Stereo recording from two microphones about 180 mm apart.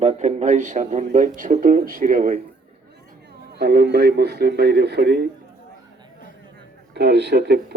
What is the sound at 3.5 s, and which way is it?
A man's voice, 60° right (ahead or behind).